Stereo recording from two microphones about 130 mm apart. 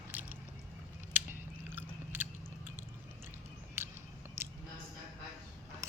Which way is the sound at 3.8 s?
20° right (ahead or behind).